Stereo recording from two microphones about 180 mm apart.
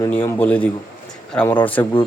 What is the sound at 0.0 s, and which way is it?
Speech, 15° left (ahead or behind).